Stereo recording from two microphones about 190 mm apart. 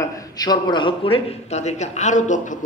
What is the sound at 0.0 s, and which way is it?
A man's voice, 20° left (ahead or behind).